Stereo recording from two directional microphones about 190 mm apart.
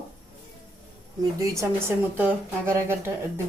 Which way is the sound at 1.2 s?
15° right (ahead or behind).